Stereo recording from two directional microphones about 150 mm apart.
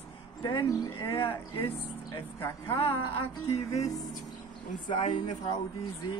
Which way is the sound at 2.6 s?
35° left (ahead or behind).